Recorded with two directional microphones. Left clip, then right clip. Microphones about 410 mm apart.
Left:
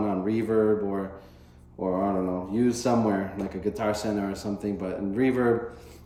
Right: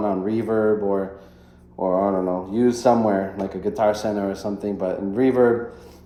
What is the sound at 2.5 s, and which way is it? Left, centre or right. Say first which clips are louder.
Speech: right 7 dB; centre.